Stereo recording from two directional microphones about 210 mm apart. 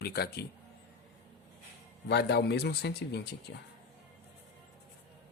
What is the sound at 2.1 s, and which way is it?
Speech, 50° left (ahead or behind).